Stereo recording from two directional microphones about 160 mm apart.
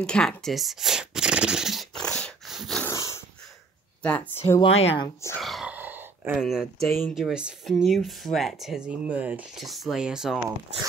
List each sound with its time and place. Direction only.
0.0 s a sound: 5° left (ahead or behind)
2.8 s dog: 20° left (ahead or behind)
4.0 s speech: 10° left (ahead or behind)
4.6 s speech: 40° left (ahead or behind)
5.4 s grunt: centre (ahead or behind)
6.4 s speech: centre (ahead or behind)